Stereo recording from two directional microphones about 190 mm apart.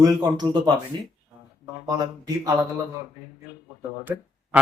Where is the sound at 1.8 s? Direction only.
20° right (ahead or behind).